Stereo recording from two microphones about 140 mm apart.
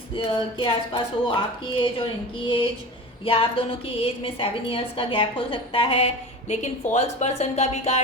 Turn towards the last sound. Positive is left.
turn(degrees=50)  # may be behind; listen again after turning